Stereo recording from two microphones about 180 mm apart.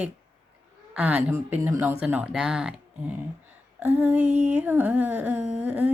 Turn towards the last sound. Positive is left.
turn(degrees=-10)  # may be behind; listen again after turning